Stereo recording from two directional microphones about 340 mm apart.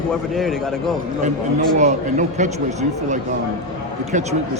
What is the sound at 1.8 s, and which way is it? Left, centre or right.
Speech, right.